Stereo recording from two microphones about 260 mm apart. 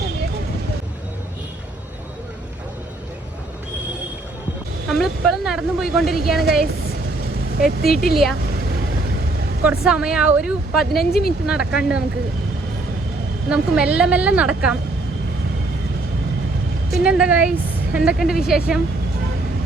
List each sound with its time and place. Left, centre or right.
4.9 s speech: centre
7.6 s a woman's voice: left
9.6 s speech: centre
11.1 s a woman's voice: left
11.4 s speech: centre
13.5 s speech: centre
16.9 s speech: centre